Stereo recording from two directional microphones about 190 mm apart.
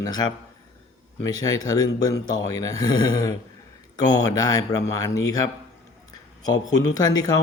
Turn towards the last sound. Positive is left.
turn(degrees=20)  # may be behind; listen again after turning